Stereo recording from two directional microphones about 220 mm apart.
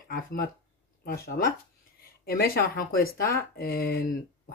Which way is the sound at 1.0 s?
45° left (ahead or behind).